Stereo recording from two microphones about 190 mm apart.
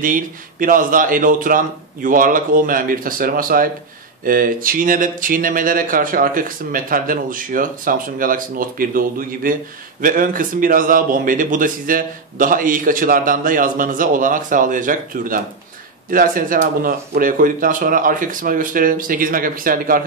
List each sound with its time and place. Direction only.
0.0 s speech: 45° right (ahead or behind)